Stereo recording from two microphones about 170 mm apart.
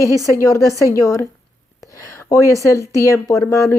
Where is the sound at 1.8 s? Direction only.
20° left (ahead or behind).